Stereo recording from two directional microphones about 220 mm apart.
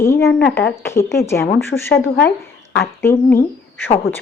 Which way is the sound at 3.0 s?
10° left (ahead or behind).